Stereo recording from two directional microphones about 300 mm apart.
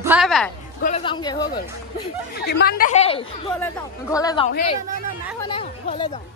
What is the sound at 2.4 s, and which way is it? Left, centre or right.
A woman's voice, left.